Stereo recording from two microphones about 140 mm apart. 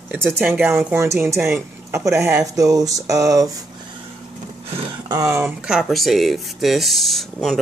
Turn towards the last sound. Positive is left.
turn(degrees=0)  # may be behind; listen again after turning